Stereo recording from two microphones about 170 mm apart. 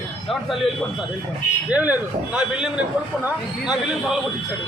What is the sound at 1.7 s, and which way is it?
A man's voice, 10° right (ahead or behind).